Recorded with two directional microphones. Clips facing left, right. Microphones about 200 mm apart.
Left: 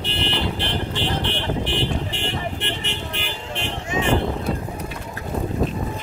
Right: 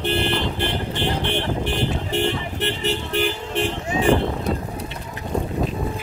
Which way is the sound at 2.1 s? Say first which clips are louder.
Right 5 dB; 40° right (ahead or behind).